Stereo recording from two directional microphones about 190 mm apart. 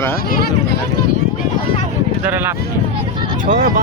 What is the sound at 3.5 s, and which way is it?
Speech, 45° right (ahead or behind).